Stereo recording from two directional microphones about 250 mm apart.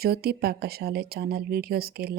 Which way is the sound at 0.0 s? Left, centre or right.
Right.